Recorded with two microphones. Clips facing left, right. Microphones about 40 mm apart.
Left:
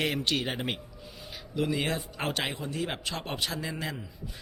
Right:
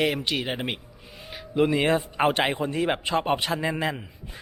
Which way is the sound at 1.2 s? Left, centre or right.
Right.